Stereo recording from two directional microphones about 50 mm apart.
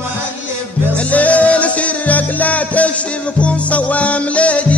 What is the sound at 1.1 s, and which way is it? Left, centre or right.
Music, left.